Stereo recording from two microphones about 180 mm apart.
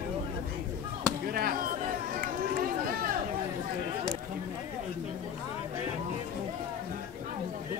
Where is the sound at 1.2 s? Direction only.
55° right (ahead or behind).